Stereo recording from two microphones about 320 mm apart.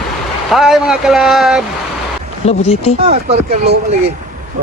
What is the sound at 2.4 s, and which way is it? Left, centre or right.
Speech, centre.